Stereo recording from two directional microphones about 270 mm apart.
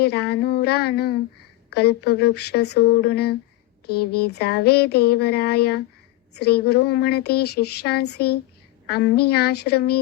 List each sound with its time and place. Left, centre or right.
0.0 s speech: left